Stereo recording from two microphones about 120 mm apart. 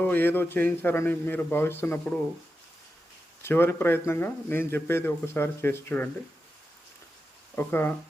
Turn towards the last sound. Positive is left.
turn(degrees=15)  # may be behind; listen again after turning